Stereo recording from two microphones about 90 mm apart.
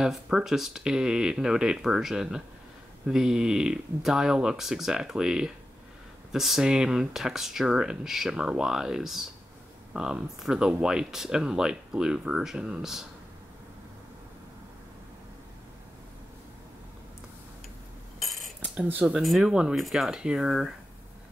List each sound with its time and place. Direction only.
0.0 s speech: 5° right (ahead or behind)
18.2 s cutlery: centre (ahead or behind)
18.6 s speech: 15° right (ahead or behind)
19.1 s speech: centre (ahead or behind)